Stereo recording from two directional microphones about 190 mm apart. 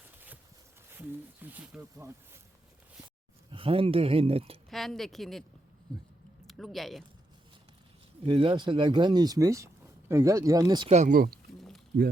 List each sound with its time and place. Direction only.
0.9 s speech: 10° right (ahead or behind)
3.5 s speech: 30° right (ahead or behind)
4.7 s speech: centre (ahead or behind)
6.5 s speech: centre (ahead or behind)
8.2 s speech: 30° right (ahead or behind)
10.8 s speech: 40° right (ahead or behind)